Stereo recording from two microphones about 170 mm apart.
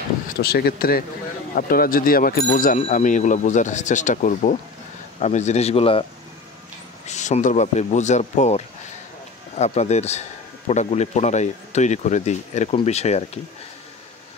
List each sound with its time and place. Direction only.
0.4 s a man's voice: 65° left (ahead or behind); by 6.0 s 35° left (ahead or behind)
7.1 s a man's voice: 45° left (ahead or behind)